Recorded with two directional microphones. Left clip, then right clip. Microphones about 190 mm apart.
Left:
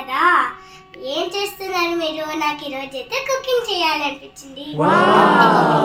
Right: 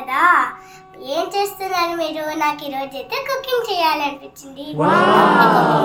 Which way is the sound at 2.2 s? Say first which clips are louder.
Right 2 dB; 5° right (ahead or behind).